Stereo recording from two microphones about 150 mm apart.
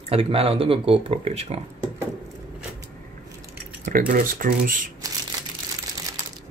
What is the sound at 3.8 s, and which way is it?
Speech, 65° right (ahead or behind).